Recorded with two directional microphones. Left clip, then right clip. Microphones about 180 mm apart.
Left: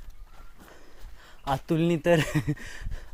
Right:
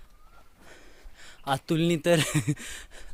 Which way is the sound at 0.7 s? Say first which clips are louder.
Right 1 dB; 30° right (ahead or behind).